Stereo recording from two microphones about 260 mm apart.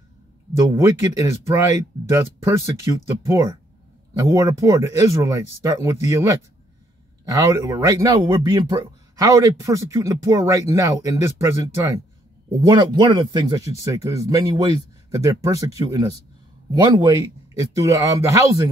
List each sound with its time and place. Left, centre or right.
0.5 s speech: centre